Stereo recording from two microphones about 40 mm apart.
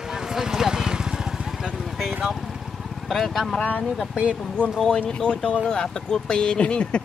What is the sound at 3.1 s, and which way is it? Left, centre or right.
Speech, centre.